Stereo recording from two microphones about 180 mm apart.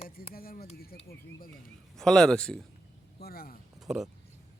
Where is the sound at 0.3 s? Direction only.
55° left (ahead or behind).